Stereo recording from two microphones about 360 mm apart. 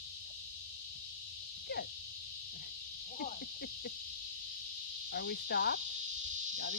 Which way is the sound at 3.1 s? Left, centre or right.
Left.